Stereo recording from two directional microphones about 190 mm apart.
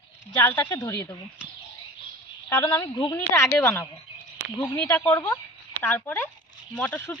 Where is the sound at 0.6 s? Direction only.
20° left (ahead or behind).